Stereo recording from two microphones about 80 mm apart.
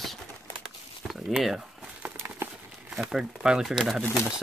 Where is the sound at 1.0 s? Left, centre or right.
Centre.